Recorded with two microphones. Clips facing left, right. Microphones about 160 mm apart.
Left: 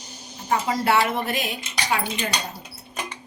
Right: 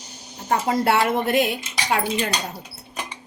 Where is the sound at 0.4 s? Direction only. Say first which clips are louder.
Right 2 dB; 50° right (ahead or behind).